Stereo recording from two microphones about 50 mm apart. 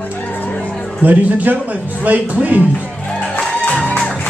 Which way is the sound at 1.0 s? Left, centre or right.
Right.